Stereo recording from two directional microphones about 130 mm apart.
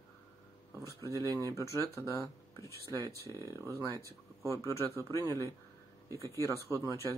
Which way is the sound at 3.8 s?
25° right (ahead or behind).